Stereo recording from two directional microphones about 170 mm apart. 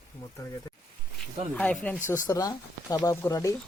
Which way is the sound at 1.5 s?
5° left (ahead or behind).